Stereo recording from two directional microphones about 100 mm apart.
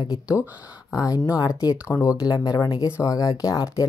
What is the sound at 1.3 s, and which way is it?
Speech, 40° left (ahead or behind).